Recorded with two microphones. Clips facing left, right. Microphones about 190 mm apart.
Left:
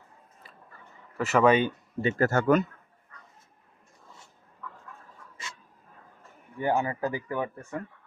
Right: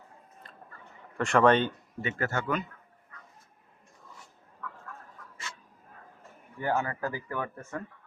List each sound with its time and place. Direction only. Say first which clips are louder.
0.4 s a sound: left 2 dB; 5° left (ahead or behind)
1.1 s speech: left 1 dB; 5° left (ahead or behind)
2.0 s speech: left 7 dB; 35° left (ahead or behind)
6.6 s speech: left 3 dB; 20° left (ahead or behind)